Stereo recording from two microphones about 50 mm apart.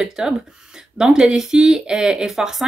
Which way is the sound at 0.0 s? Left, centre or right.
Centre.